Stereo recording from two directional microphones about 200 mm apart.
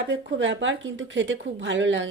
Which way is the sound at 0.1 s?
65° right (ahead or behind).